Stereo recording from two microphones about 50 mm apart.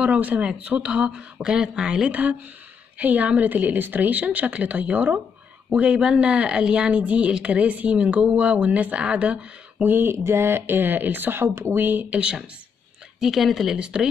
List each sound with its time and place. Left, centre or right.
0.0 s speech: right
3.0 s a woman's voice: right
9.8 s speech: right
10.1 s speech: right
11.4 s speech: right
11.7 s a woman's voice: right
12.1 s speech: right
13.2 s speech: centre
13.7 s speech: right